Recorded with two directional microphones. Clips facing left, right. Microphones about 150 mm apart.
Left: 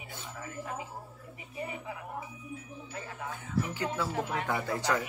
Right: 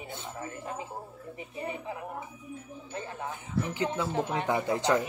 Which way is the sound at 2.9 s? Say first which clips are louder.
Right 4 dB; 25° right (ahead or behind).